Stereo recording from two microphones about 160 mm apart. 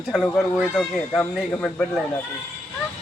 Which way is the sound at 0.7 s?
5° left (ahead or behind).